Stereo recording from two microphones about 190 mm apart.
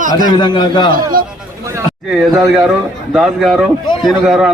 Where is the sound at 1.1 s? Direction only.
50° right (ahead or behind).